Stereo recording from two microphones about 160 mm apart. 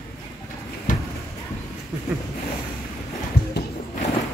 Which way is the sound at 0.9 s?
55° left (ahead or behind).